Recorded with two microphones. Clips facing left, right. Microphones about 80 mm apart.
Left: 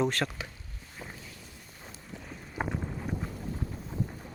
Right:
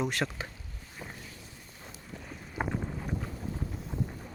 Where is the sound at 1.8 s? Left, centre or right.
Centre.